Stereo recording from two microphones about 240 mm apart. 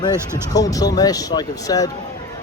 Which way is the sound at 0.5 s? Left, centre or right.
Centre.